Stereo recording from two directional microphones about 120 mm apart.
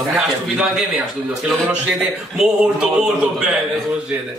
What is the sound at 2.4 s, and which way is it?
Speech, 5° right (ahead or behind).